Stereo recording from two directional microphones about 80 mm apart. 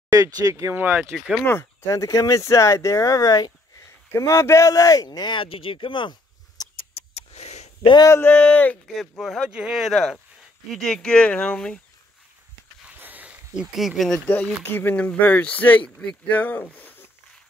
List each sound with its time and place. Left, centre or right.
0.1 s speech: right
0.7 s speech: right
1.1 s speech: centre
1.4 s speech: left
4.1 s speech: left
8.2 s speech: centre
8.8 s speech: centre
12.8 s a sound: centre
13.6 s speech: centre
14.2 s speech: left